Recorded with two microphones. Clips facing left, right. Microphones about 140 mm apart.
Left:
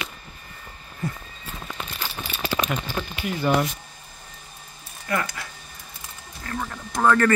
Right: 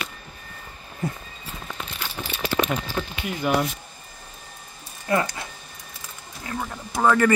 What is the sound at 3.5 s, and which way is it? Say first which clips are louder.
Speech: left 1 dB; 10° right (ahead or behind).